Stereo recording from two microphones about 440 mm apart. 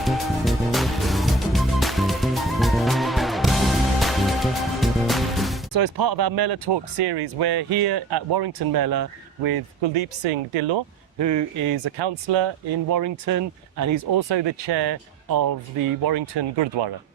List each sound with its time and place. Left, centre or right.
0.0 s music: centre
5.7 s speech: right
9.8 s speech: right
11.2 s speech: right
11.9 s speech: right
12.9 s speech: right
16.0 s speech: right